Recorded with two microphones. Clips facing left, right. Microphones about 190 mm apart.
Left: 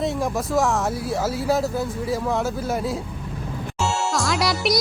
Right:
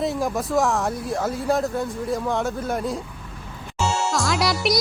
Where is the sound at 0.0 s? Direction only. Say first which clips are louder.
Even; centre (ahead or behind).